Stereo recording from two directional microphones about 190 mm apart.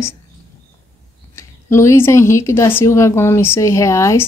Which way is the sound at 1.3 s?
15° left (ahead or behind).